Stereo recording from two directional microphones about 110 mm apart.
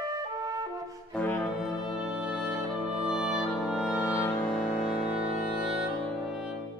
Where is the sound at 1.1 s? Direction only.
15° left (ahead or behind).